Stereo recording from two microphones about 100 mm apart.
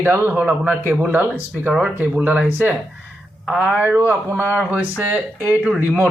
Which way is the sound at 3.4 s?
5° right (ahead or behind).